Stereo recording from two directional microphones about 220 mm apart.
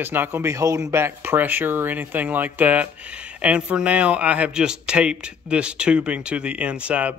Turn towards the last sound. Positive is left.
turn(degrees=-5)  # may be behind; listen again after turning